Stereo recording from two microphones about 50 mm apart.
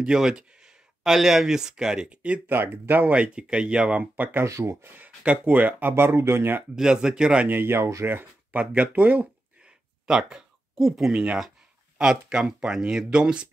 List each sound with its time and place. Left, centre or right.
0.0 s speech: centre
2.4 s speech: right
4.0 s speech: right
4.5 s speech: right
4.8 s speech: right
5.2 s speech: right
6.7 s speech: centre
7.4 s speech: right
8.5 s a sound: right
10.9 s speech: centre